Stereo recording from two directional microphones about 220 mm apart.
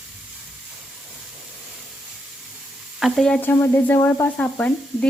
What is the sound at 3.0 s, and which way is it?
Speech, centre (ahead or behind).